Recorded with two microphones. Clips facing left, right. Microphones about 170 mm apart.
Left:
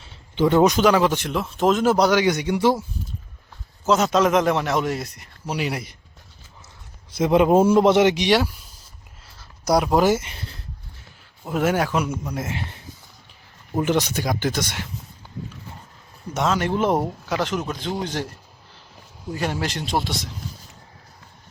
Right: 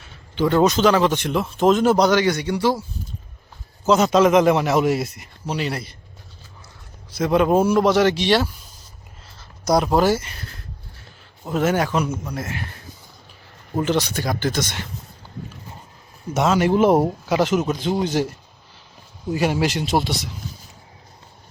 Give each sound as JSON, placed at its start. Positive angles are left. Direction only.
{"t": 0.4, "sound": "speech", "side_deg": 15}
{"t": 3.8, "sound": "a man's voice", "side_deg": 0}
{"t": 5.5, "sound": "speech", "side_deg": 10}
{"t": 7.2, "sound": "a man's voice", "side_deg": 20}
{"t": 9.6, "sound": "speech", "side_deg": 10}
{"t": 11.4, "sound": "speech", "side_deg": 10}
{"t": 12.3, "sound": "a man's voice", "side_deg": 25}
{"t": 13.8, "sound": "speech", "side_deg": 15}
{"t": 16.3, "sound": "speech", "side_deg": -10}
{"t": 19.3, "sound": "a man's voice", "side_deg": -10}